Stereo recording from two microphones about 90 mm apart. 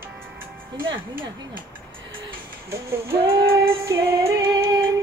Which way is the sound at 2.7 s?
30° right (ahead or behind).